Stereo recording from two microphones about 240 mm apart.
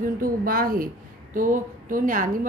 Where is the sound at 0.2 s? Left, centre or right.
Right.